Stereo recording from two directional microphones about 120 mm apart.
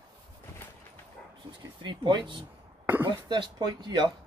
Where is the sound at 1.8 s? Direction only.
40° right (ahead or behind).